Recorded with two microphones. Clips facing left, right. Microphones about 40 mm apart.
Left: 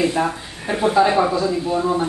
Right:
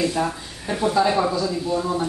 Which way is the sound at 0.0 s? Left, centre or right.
Left.